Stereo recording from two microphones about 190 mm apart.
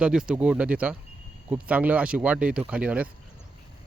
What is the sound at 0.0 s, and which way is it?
Speech, 5° right (ahead or behind).